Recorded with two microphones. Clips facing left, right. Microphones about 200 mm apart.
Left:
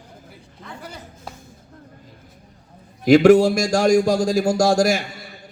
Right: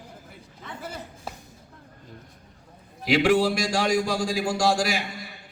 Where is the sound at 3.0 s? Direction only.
45° left (ahead or behind).